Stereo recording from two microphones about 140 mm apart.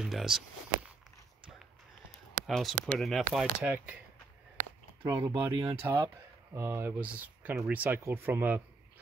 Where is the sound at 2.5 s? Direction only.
Centre (ahead or behind).